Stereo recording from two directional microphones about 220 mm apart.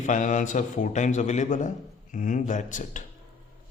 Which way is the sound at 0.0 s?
35° left (ahead or behind).